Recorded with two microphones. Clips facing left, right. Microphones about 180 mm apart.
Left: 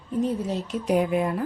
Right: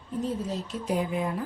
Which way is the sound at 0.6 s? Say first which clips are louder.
Left 8 dB; 70° left (ahead or behind).